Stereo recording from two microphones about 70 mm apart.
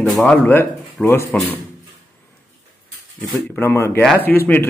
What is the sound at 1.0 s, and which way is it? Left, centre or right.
Speech, left.